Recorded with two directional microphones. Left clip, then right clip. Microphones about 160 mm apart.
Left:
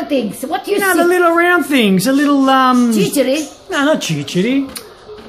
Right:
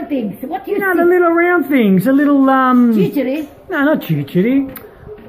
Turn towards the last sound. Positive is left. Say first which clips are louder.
# right 1 dB
turn(degrees=0)  # may be behind; listen again after turning